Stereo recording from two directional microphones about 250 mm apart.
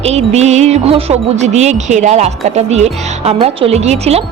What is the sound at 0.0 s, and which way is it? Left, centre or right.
Music, right.